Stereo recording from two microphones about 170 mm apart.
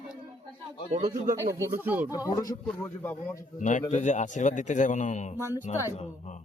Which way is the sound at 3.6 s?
45° left (ahead or behind).